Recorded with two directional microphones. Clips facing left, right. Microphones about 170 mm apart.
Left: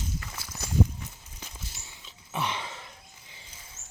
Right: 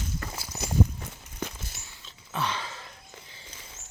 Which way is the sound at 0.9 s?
65° right (ahead or behind).